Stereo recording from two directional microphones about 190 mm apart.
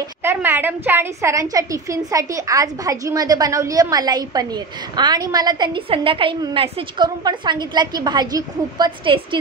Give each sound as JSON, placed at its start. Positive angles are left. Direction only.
{"t": 0.2, "sound": "a woman's voice", "side_deg": -10}